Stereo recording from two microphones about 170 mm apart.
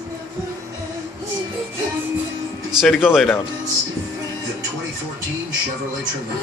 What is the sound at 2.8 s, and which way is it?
Speech, centre (ahead or behind).